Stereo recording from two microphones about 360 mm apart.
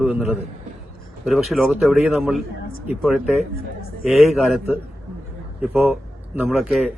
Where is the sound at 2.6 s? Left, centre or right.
Left.